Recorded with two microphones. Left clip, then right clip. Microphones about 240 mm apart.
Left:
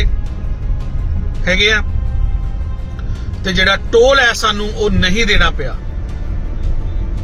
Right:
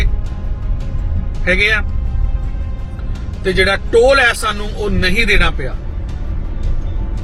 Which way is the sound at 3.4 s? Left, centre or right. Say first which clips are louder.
Left 1 dB; centre.